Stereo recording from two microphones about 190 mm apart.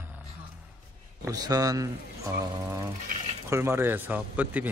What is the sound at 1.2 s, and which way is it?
Speech, 20° right (ahead or behind).